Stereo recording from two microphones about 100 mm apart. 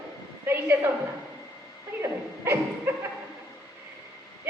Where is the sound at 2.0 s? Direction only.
30° right (ahead or behind).